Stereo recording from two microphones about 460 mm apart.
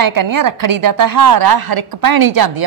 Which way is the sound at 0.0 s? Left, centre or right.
Right.